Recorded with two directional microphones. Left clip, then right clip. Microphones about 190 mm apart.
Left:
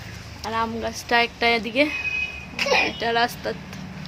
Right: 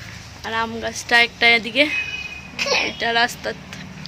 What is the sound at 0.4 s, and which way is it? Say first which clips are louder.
A woman's voice: right 2 dB; centre (ahead or behind).